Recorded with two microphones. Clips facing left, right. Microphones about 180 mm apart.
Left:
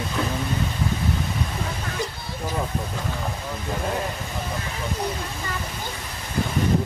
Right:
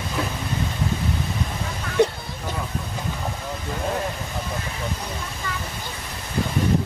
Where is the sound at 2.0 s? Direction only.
65° right (ahead or behind).